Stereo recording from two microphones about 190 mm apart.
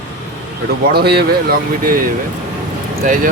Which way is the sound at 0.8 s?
55° right (ahead or behind).